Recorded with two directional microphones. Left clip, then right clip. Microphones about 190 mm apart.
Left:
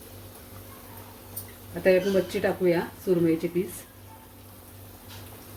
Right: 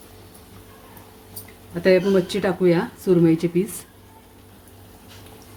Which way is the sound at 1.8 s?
55° right (ahead or behind).